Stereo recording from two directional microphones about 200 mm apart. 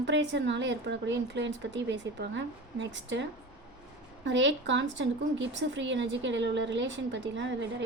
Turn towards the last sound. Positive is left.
turn(degrees=-60)  # may be behind; listen again after turning